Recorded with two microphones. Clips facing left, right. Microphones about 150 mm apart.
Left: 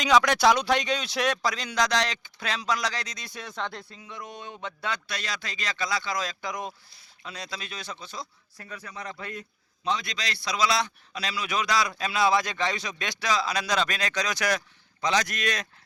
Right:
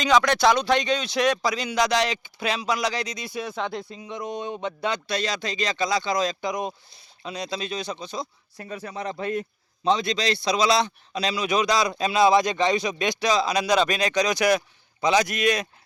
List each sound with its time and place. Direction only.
0.0 s a man's voice: 10° left (ahead or behind); by 15.6 s 10° right (ahead or behind)